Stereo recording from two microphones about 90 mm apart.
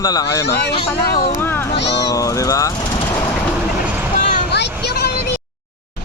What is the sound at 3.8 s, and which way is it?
Vehicle, 20° right (ahead or behind).